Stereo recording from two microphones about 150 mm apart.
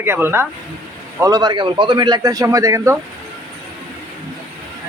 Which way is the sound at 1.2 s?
25° right (ahead or behind).